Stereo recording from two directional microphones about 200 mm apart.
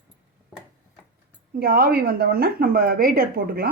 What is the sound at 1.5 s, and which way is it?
Speech, 45° right (ahead or behind).